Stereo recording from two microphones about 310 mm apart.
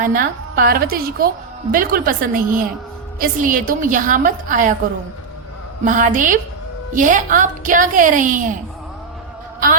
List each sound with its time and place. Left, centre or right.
0.0 s a woman's voice: right
5.8 s a woman's voice: right